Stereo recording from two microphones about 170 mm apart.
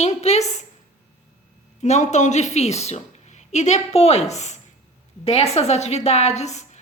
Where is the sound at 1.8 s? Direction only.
45° left (ahead or behind).